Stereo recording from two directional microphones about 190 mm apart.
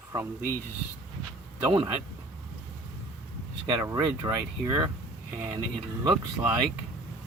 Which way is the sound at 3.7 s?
20° right (ahead or behind).